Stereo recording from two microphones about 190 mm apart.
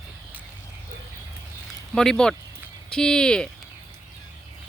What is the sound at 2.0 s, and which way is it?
Speech, 5° left (ahead or behind).